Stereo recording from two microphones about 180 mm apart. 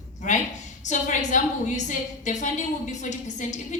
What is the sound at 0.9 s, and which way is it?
A woman's voice, 45° left (ahead or behind).